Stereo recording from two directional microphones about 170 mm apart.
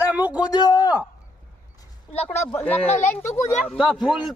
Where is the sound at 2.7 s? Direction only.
35° left (ahead or behind).